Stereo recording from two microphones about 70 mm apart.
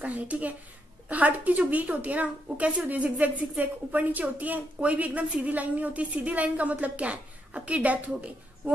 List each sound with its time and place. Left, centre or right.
0.0 s a woman's voice: right